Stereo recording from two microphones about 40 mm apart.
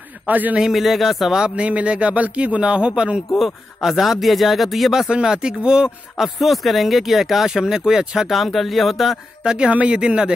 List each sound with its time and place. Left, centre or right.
0.3 s a man's voice: right
0.7 s speech: centre
1.4 s a man's voice: right
3.3 s speech: centre
5.1 s speech: centre
6.1 s speech: centre
8.3 s speech: centre
9.4 s speech: right
9.7 s a man's voice: right
9.9 s speech: right